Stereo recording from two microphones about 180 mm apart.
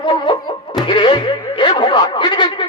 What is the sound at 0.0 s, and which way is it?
Music, 25° left (ahead or behind).